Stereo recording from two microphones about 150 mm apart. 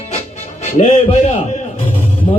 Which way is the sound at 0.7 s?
40° left (ahead or behind).